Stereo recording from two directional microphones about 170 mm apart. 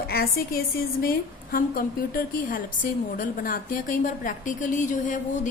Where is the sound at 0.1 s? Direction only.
65° left (ahead or behind).